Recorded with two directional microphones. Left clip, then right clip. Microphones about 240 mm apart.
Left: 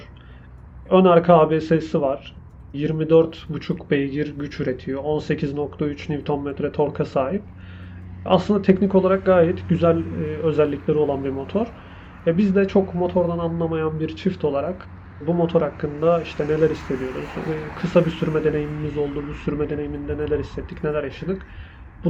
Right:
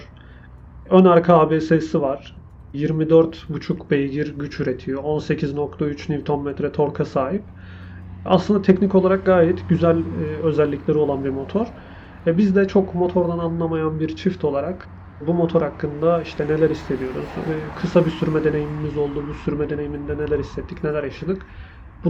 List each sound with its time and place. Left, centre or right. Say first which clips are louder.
0.9 s speech: right 1 dB; centre
16.8 s speech: right 1 dB; right
17.7 s speech: even; centre
22.0 s owl: right 1 dB; centre